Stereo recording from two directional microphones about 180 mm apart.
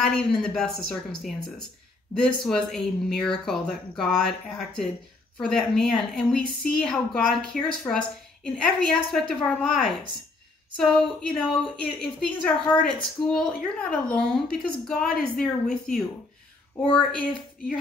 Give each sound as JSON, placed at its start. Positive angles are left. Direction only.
{"t": 0.0, "sound": "a woman's voice", "side_deg": 5}
{"t": 16.8, "sound": "speech", "side_deg": 30}